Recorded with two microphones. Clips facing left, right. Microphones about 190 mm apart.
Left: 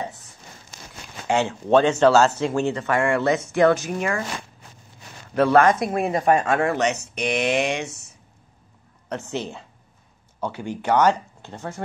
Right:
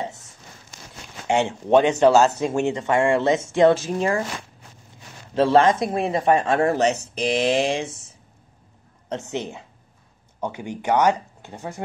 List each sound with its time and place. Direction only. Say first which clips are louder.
1.2 s speech: right 1 dB; 20° right (ahead or behind)
5.3 s speech: even; 25° right (ahead or behind)
9.1 s speech: right 1 dB; 15° right (ahead or behind)